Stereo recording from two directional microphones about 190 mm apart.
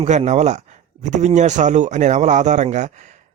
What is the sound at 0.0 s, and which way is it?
Speech, 35° right (ahead or behind).